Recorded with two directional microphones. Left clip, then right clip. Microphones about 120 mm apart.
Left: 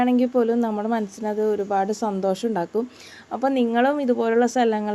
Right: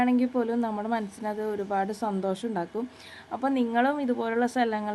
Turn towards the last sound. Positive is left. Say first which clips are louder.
# left 6 dB
turn(degrees=35)  # may be behind; listen again after turning